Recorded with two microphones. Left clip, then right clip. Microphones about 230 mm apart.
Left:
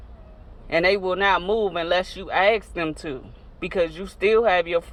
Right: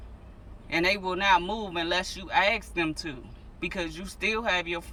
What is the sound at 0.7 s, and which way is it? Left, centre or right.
Speech, centre.